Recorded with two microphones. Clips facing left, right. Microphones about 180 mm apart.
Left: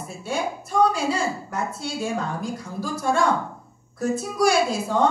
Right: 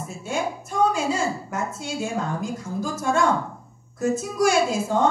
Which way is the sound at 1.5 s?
35° left (ahead or behind).